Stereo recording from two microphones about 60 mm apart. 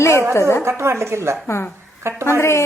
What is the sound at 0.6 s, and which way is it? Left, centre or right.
Speech, right.